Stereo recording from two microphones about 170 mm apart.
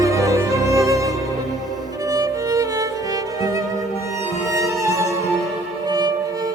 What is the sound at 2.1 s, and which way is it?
Music, 20° right (ahead or behind).